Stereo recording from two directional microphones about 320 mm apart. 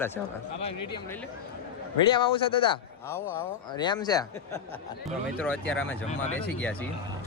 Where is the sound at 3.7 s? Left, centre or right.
Centre.